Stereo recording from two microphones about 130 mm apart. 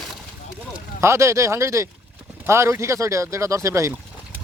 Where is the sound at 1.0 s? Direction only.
20° right (ahead or behind).